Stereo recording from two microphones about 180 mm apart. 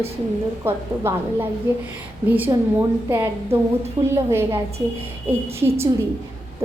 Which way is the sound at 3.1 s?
15° right (ahead or behind).